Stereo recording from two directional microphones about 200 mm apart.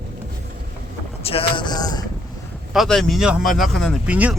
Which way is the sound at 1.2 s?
30° left (ahead or behind).